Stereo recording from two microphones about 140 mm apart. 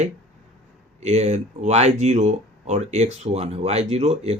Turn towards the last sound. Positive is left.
turn(degrees=-50)  # may be behind; listen again after turning